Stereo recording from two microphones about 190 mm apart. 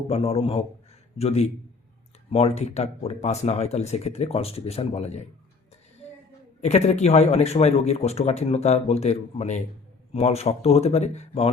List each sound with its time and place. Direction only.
0.1 s speech: 30° left (ahead or behind)
6.6 s speech: 35° left (ahead or behind)